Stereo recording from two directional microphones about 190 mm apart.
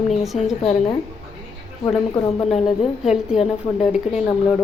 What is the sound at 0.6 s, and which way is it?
Speech, 35° left (ahead or behind).